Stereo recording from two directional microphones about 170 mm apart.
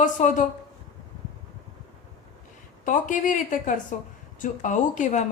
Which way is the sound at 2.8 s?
50° left (ahead or behind).